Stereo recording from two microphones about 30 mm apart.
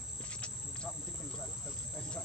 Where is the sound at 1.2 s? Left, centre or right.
Left.